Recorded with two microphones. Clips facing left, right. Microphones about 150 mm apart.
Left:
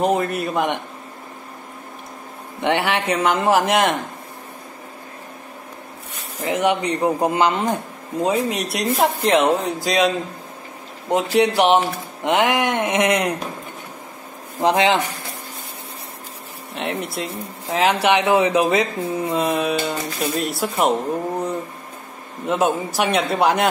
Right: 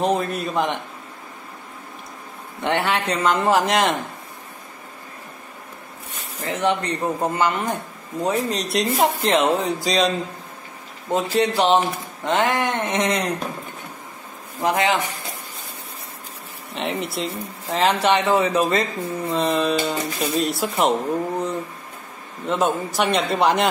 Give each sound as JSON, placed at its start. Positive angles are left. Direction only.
{"t": 0.0, "sound": "speech", "side_deg": 5}
{"t": 2.6, "sound": "speech", "side_deg": 10}
{"t": 6.4, "sound": "speech", "side_deg": 15}
{"t": 11.1, "sound": "speech", "side_deg": 15}
{"t": 14.6, "sound": "speech", "side_deg": 25}
{"t": 16.7, "sound": "speech", "side_deg": 0}
{"t": 22.5, "sound": "speech", "side_deg": 10}